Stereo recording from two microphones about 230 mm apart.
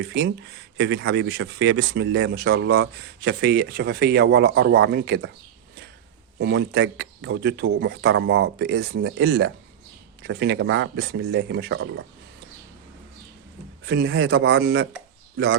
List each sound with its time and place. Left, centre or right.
0.0 s speech: right
6.4 s speech: right
13.8 s speech: right